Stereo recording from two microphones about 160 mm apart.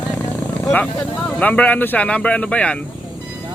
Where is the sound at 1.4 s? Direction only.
10° left (ahead or behind).